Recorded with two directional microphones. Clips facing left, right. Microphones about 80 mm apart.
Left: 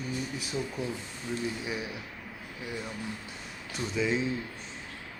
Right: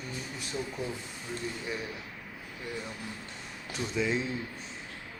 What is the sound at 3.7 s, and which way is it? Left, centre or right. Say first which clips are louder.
Speech: left 1 dB; centre.